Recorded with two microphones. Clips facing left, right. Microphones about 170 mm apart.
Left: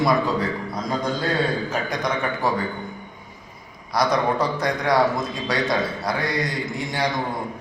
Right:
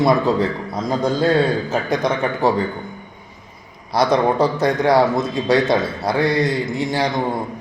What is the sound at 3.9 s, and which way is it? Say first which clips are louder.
A man's voice: right 5 dB; 30° right (ahead or behind).